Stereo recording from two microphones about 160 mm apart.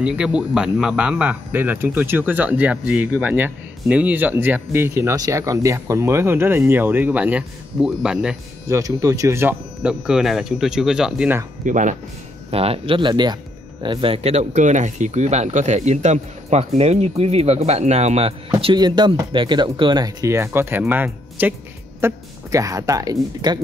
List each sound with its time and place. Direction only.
0.0 s speech: 5° right (ahead or behind)
8.6 s speech: 20° right (ahead or behind)
11.6 s speech: 50° right (ahead or behind)
12.4 s speech: 35° right (ahead or behind)
18.6 s speech: 30° right (ahead or behind)